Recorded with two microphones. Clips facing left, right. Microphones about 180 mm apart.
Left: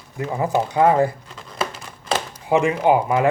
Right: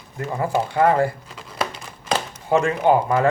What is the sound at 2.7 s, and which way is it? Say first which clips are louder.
Speech: even; 5° left (ahead or behind).